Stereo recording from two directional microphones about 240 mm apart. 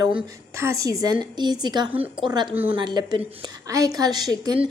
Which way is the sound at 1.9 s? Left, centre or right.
Centre.